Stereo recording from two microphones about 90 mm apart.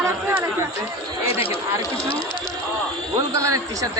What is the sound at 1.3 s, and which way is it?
Speech, 90° left.